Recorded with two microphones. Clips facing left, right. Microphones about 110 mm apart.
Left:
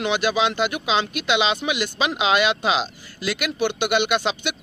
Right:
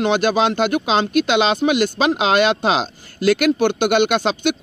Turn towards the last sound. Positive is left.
turn(degrees=-45)  # may be behind; listen again after turning